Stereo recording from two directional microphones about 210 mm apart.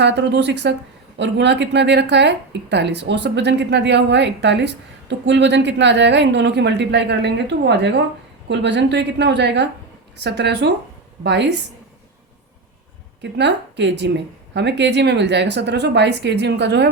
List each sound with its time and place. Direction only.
0.0 s a woman's voice: 55° right (ahead or behind)
13.2 s speech: 55° right (ahead or behind)